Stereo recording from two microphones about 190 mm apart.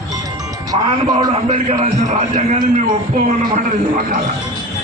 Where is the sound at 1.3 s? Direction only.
40° right (ahead or behind).